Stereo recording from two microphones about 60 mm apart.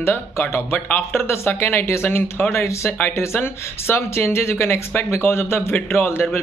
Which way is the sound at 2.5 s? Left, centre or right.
Left.